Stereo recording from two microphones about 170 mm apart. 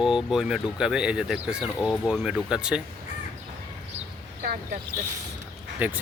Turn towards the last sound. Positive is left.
turn(degrees=-10)  # may be behind; listen again after turning